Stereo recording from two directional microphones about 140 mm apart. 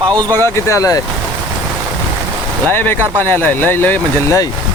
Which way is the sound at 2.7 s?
15° left (ahead or behind).